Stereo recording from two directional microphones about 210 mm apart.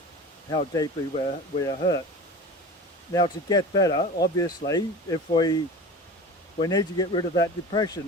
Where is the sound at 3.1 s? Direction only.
20° left (ahead or behind).